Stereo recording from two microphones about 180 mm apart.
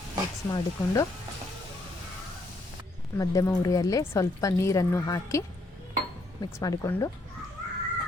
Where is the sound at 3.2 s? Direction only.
20° left (ahead or behind).